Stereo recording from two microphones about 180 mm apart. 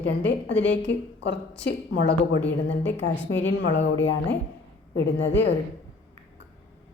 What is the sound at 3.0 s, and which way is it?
Speech, 90° left.